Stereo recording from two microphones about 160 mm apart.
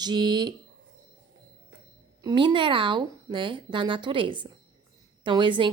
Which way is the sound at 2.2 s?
30° right (ahead or behind).